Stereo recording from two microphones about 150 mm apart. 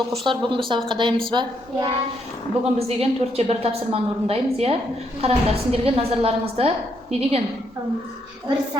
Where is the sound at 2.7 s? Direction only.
40° right (ahead or behind).